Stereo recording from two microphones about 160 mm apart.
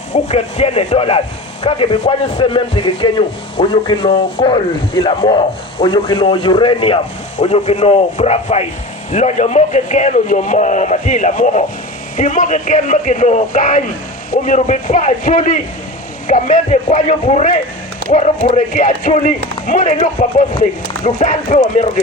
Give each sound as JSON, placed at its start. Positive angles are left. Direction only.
{"t": 0.1, "sound": "a man's voice", "side_deg": 45}